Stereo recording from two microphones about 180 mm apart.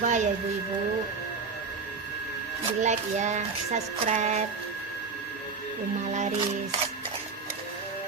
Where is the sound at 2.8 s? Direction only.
40° right (ahead or behind).